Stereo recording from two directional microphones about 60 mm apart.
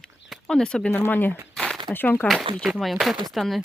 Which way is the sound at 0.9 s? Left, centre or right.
Left.